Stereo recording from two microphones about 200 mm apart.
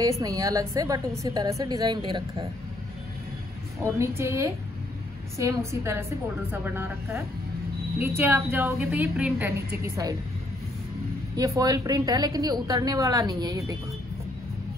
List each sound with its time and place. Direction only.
0.2 s a woman's voice: 15° right (ahead or behind)
3.8 s a woman's voice: 15° right (ahead or behind)
11.3 s a woman's voice: 15° right (ahead or behind)